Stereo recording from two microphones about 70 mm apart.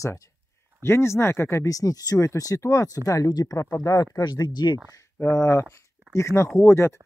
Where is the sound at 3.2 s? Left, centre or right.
Left.